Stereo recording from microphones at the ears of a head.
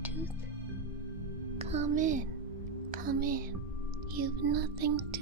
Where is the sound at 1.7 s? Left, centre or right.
Right.